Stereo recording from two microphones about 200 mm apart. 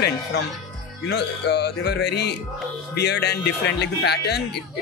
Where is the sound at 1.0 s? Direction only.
55° left (ahead or behind).